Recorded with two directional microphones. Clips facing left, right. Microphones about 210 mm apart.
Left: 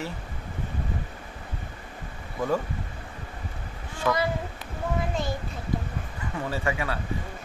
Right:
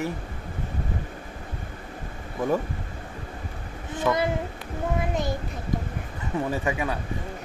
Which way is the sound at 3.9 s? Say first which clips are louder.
Right 2 dB; 20° right (ahead or behind).